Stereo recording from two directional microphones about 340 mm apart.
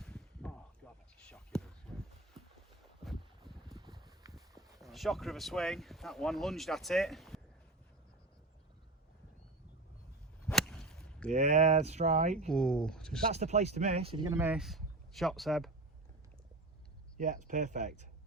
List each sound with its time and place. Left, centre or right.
0.0 s a sound: centre
1.3 s whispering: centre
3.0 s boat: centre
3.7 s boat: centre
4.8 s speech: centre
10.4 s whip: centre
11.3 s speech: right
12.5 s speech: centre
13.2 s speech: centre
17.2 s speech: right